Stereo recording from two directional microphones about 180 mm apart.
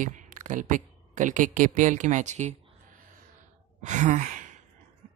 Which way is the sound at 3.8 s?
40° right (ahead or behind).